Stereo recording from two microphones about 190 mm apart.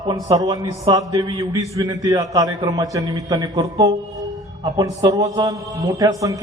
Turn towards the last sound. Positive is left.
turn(degrees=-15)  # may be behind; listen again after turning